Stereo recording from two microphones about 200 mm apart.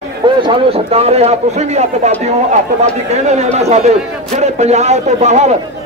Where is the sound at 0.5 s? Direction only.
30° right (ahead or behind).